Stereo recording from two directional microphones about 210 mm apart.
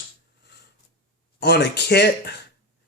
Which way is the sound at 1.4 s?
55° left (ahead or behind).